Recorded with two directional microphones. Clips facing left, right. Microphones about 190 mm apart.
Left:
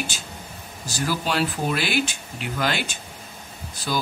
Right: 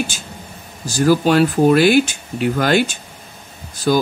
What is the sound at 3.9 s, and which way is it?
Speech, 50° right (ahead or behind).